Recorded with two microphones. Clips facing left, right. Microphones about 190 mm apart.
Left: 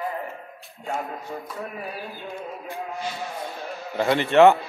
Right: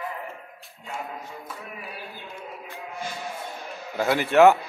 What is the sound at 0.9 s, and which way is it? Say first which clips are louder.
Music: left 5 dB; 45° left (ahead or behind).